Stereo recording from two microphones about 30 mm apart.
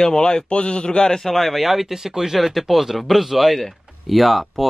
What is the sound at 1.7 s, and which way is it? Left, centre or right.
Speech, centre.